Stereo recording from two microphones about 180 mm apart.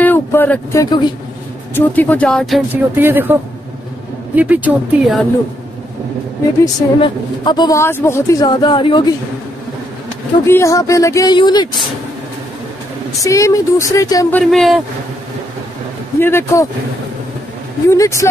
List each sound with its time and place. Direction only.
0.0 s speech: 10° left (ahead or behind)
1.8 s speech: 10° left (ahead or behind)
2.7 s speech: 10° right (ahead or behind)
4.4 s speech: 10° right (ahead or behind)
6.6 s a woman's voice: 25° left (ahead or behind)
10.4 s speech: 15° left (ahead or behind)
13.2 s a woman's voice: 20° left (ahead or behind)
14.3 s speech: centre (ahead or behind)
16.2 s speech: 15° left (ahead or behind)
17.8 s speech: 15° left (ahead or behind)